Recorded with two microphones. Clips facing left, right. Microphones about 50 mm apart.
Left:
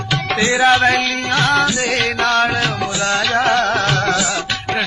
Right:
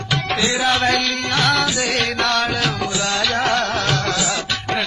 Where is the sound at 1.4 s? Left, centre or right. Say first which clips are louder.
Left 3 dB; left.